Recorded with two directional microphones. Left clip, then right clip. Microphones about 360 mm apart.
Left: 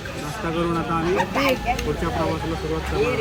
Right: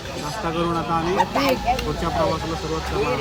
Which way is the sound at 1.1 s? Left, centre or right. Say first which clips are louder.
Right 1 dB; right.